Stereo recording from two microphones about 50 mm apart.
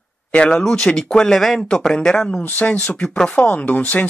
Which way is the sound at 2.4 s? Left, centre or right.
Left.